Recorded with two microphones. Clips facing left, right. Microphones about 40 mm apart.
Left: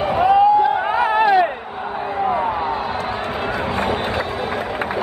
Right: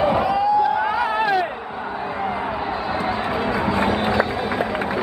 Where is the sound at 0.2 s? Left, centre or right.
Left.